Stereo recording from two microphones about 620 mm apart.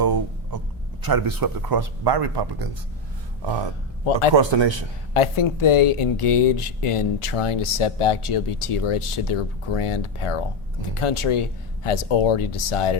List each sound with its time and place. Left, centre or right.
0.0 s a sound: right
1.0 s speech: right
4.4 s speech: right
5.1 s speech: left